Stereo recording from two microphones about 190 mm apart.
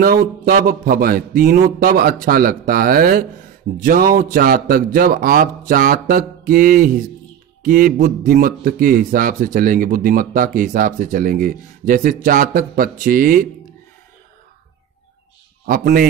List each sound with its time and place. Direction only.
0.5 s a man's voice: 50° right (ahead or behind)
15.6 s a man's voice: 50° right (ahead or behind)